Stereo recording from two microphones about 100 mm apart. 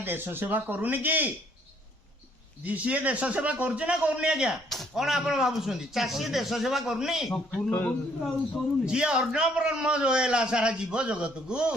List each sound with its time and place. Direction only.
0.0 s speech: 20° right (ahead or behind)
2.6 s a man's voice: 15° right (ahead or behind)
7.3 s speech: 15° left (ahead or behind)
8.2 s a man's voice: 5° right (ahead or behind)